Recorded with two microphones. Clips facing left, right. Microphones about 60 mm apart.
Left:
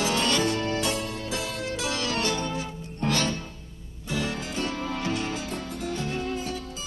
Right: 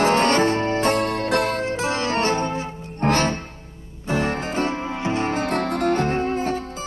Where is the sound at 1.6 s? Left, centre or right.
Right.